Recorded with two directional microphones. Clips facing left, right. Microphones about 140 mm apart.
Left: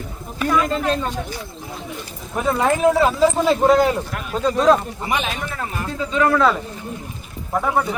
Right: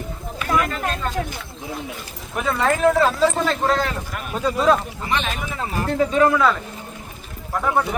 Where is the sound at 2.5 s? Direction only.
15° left (ahead or behind).